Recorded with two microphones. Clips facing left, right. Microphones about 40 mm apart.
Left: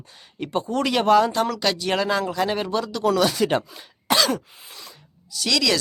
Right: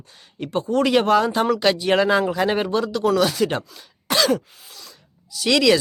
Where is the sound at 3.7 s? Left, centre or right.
Centre.